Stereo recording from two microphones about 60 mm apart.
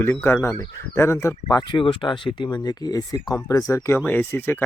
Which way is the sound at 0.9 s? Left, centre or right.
Left.